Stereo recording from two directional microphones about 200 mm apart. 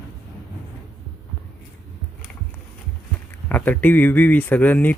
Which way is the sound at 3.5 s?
10° left (ahead or behind).